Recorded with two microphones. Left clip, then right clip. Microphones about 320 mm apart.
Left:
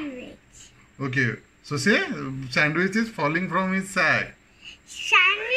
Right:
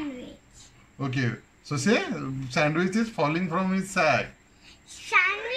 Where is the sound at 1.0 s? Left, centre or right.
Centre.